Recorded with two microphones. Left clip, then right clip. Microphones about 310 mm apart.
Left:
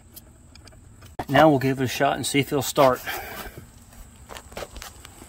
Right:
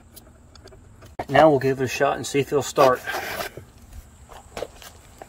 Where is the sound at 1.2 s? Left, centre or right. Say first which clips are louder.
Right 1 dB; left.